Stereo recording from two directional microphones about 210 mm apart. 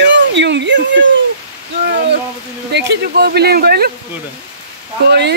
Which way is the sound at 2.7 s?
55° right (ahead or behind).